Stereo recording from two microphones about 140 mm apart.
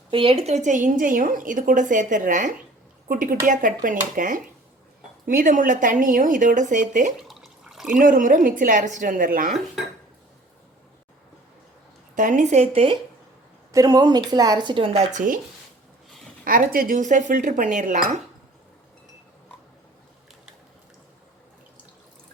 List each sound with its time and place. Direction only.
0.1 s a woman's voice: 40° right (ahead or behind); by 4.4 s 75° right (ahead or behind)
5.2 s a woman's voice: 90° right; by 7.1 s 65° right (ahead or behind)
7.2 s water: centre (ahead or behind)
7.9 s a woman's voice: 75° right (ahead or behind)
12.1 s a woman's voice: 65° right (ahead or behind)
13.7 s speech: 25° right (ahead or behind)
15.1 s a woman's voice: 70° right (ahead or behind)
16.4 s a woman's voice: 90° right; by 18.2 s 70° right (ahead or behind)